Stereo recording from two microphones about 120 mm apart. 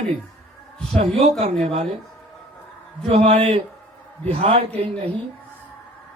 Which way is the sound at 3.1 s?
60° right (ahead or behind).